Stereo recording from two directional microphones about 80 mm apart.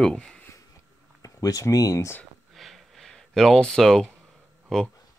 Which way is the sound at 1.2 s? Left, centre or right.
Left.